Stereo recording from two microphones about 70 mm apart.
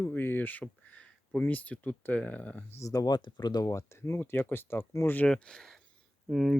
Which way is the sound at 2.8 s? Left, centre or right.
Left.